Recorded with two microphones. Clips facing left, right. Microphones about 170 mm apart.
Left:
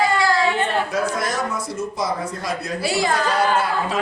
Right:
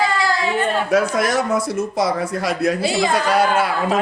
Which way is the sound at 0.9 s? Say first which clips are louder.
Right 5 dB; 75° right (ahead or behind).